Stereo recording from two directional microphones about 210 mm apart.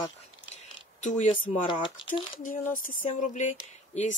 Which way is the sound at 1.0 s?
35° left (ahead or behind).